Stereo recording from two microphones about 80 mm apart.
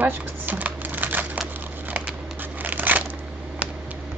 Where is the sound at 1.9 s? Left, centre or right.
Right.